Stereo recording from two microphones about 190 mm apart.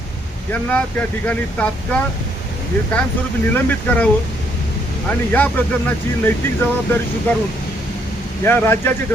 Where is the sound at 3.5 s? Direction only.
10° left (ahead or behind).